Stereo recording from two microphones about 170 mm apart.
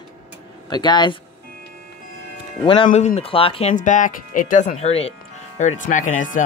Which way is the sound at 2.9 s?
40° left (ahead or behind).